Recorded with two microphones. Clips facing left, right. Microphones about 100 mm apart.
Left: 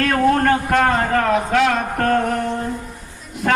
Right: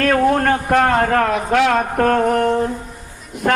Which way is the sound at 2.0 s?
90° right.